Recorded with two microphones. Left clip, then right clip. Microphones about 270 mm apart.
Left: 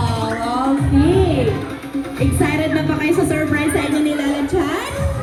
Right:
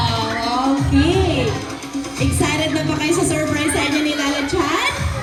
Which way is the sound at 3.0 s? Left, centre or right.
Right.